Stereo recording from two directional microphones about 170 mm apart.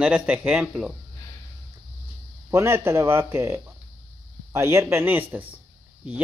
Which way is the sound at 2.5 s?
15° right (ahead or behind).